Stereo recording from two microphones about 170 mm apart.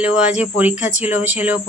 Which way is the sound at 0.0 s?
5° right (ahead or behind).